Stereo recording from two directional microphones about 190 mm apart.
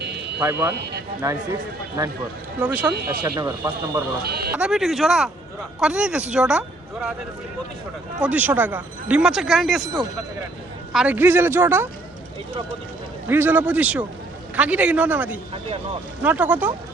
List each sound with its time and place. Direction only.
0.4 s speech: 10° right (ahead or behind)
2.6 s speech: 5° right (ahead or behind)
3.1 s speech: 20° right (ahead or behind)
4.2 s speech: 55° right (ahead or behind)
4.5 s speech: 5° right (ahead or behind)
8.2 s speech: 10° right (ahead or behind)
10.9 s speech: 5° right (ahead or behind)
13.2 s speech: 10° right (ahead or behind)